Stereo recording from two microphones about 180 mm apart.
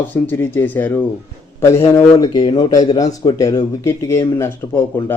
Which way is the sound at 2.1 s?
20° left (ahead or behind).